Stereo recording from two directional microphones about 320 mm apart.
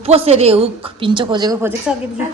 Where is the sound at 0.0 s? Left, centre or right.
Centre.